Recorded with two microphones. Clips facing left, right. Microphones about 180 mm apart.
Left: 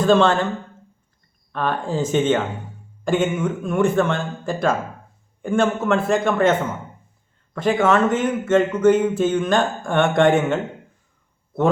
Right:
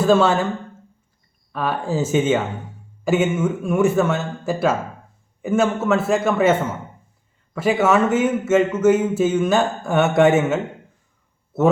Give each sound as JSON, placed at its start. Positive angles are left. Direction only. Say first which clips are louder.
{"t": 0.0, "sound": "speech", "louder": "even", "side_deg": -5}
{"t": 1.5, "sound": "a man's voice", "louder": "right 1 dB", "side_deg": -5}